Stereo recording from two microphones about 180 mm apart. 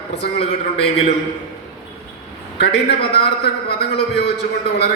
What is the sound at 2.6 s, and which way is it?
A man's voice, 65° left (ahead or behind).